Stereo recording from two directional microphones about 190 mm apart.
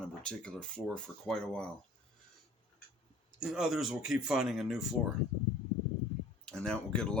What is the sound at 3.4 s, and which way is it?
Speech, 5° right (ahead or behind).